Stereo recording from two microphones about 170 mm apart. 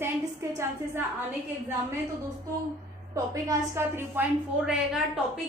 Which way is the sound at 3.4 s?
15° right (ahead or behind).